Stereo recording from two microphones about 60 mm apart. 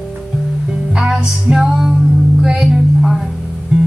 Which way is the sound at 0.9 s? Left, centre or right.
Centre.